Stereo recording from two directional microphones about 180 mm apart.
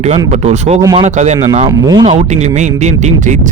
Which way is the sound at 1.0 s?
40° right (ahead or behind).